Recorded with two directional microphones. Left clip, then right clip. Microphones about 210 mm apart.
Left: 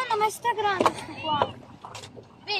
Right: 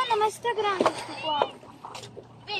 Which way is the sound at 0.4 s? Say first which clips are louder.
Left 2 dB; 55° left (ahead or behind).